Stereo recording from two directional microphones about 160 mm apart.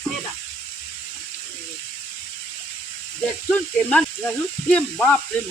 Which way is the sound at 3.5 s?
5° left (ahead or behind).